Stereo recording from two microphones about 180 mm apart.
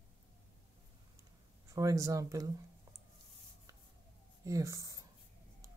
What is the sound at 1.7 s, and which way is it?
Speech, 20° right (ahead or behind).